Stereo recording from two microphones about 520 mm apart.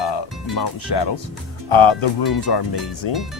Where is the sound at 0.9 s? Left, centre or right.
Left.